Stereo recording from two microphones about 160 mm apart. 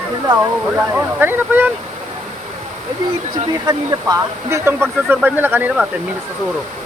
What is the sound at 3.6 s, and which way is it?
Speech, 20° right (ahead or behind).